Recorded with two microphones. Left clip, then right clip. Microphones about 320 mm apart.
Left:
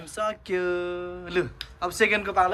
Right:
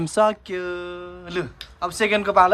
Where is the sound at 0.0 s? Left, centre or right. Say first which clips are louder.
Right 10 dB; centre.